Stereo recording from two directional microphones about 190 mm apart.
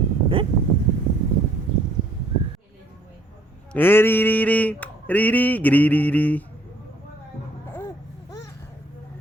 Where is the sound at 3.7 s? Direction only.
10° left (ahead or behind).